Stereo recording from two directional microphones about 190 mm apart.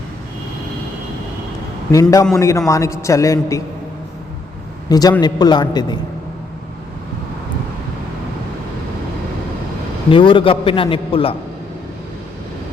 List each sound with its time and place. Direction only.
1.9 s a man's voice: 15° left (ahead or behind)
4.9 s a man's voice: 20° left (ahead or behind)
10.1 s a man's voice: 25° left (ahead or behind)